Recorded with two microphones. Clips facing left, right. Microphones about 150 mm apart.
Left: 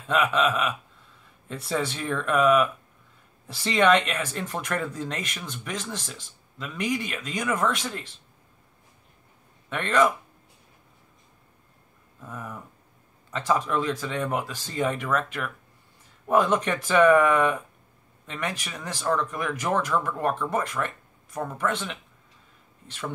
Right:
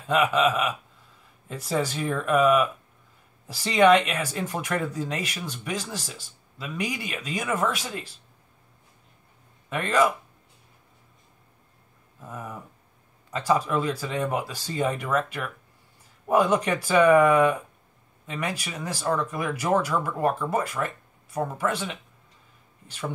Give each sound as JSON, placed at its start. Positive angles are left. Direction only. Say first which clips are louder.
{"t": 0.1, "sound": "speech", "louder": "right 2 dB", "side_deg": -5}
{"t": 9.7, "sound": "speech", "louder": "even", "side_deg": -5}
{"t": 12.2, "sound": "speech", "louder": "right 1 dB", "side_deg": -5}